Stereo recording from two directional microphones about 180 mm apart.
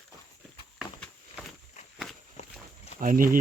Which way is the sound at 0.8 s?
Centre (ahead or behind).